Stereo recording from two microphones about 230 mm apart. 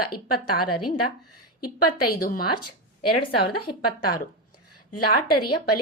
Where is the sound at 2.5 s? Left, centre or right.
Left.